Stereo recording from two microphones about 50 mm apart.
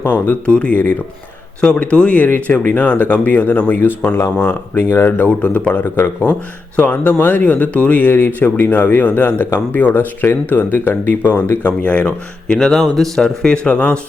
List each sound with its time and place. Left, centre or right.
0.0 s speech: left
0.4 s speech: left
5.3 s speech: left
5.8 s speech: left
11.6 s speech: left
12.5 s speech: centre